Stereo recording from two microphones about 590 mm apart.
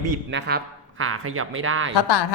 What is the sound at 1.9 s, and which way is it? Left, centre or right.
Speech, left.